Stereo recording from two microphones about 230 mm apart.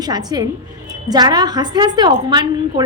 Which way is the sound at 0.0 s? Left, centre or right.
Centre.